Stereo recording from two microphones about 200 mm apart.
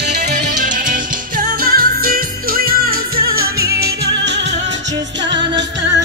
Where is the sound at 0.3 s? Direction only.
40° right (ahead or behind).